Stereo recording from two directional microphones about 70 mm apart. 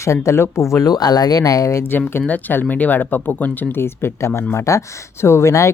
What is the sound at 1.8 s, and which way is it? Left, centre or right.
Speech, left.